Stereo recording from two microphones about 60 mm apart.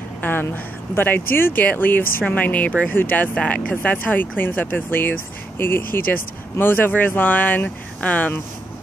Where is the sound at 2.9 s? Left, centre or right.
Left.